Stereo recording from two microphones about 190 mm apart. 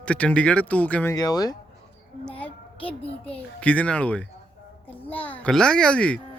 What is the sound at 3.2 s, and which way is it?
Speech, 5° left (ahead or behind).